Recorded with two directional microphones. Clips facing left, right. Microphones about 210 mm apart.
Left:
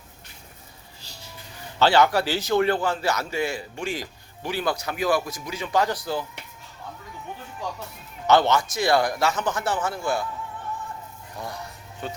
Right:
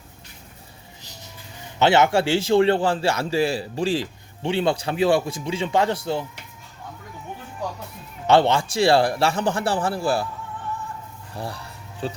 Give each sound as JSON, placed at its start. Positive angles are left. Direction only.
{"t": 1.0, "sound": "music", "side_deg": -20}
{"t": 1.8, "sound": "a man's voice", "side_deg": -25}
{"t": 8.3, "sound": "a man's voice", "side_deg": -30}
{"t": 11.3, "sound": "a man's voice", "side_deg": -30}